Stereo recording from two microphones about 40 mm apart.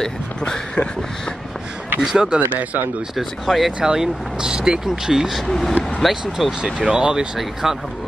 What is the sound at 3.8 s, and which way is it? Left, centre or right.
Speech, centre.